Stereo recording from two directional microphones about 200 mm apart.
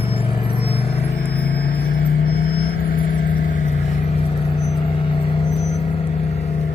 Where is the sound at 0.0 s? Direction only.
25° left (ahead or behind).